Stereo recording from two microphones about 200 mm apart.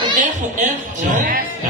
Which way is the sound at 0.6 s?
40° right (ahead or behind).